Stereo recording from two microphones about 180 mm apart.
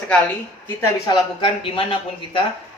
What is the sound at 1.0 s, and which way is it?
Speech, 30° left (ahead or behind).